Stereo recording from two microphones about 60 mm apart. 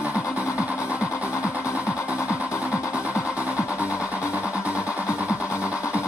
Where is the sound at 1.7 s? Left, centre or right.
Left.